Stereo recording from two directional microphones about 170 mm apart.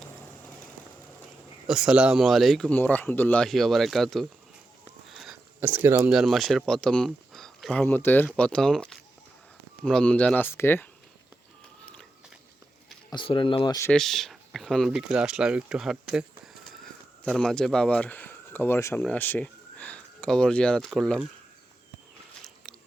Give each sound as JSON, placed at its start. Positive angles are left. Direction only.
{"t": 1.6, "sound": "speech", "side_deg": -5}
{"t": 5.0, "sound": "a sound", "side_deg": -5}
{"t": 6.1, "sound": "speech", "side_deg": 0}
{"t": 13.1, "sound": "speech", "side_deg": 30}
{"t": 13.9, "sound": "speech", "side_deg": 0}
{"t": 22.6, "sound": "biting", "side_deg": 0}